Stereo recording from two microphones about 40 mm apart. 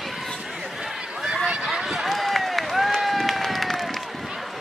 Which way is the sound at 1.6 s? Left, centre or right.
Centre.